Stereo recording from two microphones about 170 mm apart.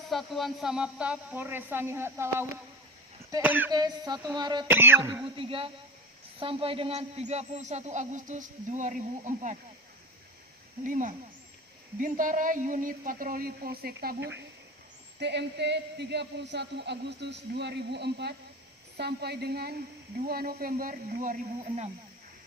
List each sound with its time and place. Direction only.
0.1 s speech: centre (ahead or behind)
3.7 s a sound: 25° right (ahead or behind)
4.7 s speech: 15° right (ahead or behind)
5.2 s speech: 30° right (ahead or behind)
10.8 s a woman's voice: 50° right (ahead or behind)